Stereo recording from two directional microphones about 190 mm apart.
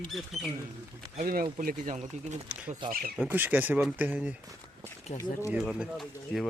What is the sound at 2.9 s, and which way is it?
Speech, 50° right (ahead or behind).